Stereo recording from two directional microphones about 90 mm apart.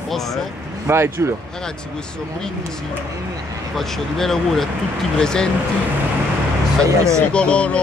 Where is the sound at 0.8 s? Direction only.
30° right (ahead or behind).